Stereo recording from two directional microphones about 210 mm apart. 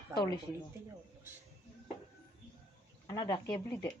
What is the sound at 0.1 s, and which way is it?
Speech, 20° left (ahead or behind).